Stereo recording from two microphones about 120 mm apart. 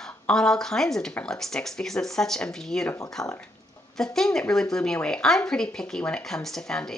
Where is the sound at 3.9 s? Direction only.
5° left (ahead or behind).